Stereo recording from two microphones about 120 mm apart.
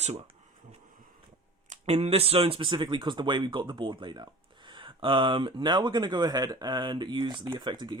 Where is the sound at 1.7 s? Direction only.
60° right (ahead or behind).